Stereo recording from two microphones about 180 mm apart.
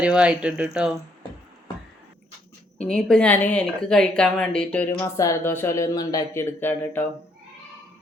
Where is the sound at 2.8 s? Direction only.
5° left (ahead or behind).